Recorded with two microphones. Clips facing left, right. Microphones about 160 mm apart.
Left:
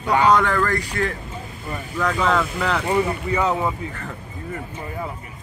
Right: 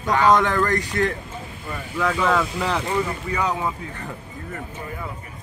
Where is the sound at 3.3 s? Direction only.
5° left (ahead or behind).